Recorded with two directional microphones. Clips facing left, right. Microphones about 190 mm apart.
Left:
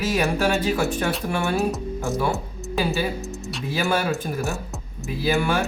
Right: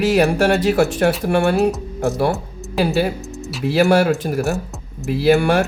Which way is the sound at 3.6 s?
70° right (ahead or behind).